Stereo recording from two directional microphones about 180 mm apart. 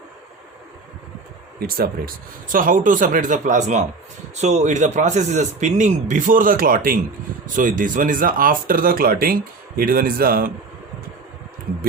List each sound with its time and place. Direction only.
1.5 s speech: 55° right (ahead or behind)